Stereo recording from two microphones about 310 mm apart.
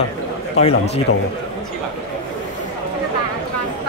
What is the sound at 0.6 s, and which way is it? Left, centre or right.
Speech, centre.